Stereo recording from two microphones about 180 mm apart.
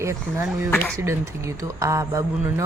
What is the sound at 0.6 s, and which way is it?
Speech, 10° left (ahead or behind).